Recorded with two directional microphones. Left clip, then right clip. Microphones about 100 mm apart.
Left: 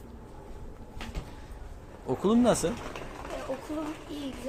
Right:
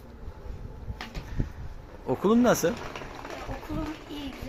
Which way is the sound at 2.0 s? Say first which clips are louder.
Right 2 dB; 15° right (ahead or behind).